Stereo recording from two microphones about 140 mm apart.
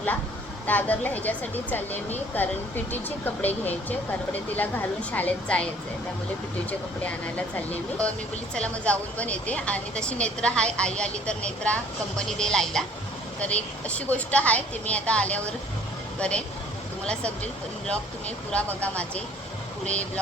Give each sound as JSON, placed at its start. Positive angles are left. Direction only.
{"t": 0.7, "sound": "speech", "side_deg": 10}
{"t": 6.7, "sound": "speech", "side_deg": 10}
{"t": 17.1, "sound": "speech", "side_deg": 10}